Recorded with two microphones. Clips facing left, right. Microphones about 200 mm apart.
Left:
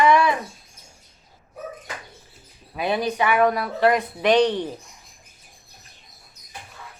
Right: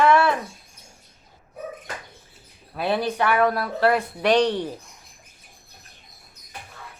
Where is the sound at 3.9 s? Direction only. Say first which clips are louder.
Left 1 dB; 15° left (ahead or behind).